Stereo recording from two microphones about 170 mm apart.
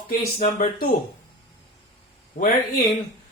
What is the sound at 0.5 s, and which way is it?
Speech, 55° left (ahead or behind).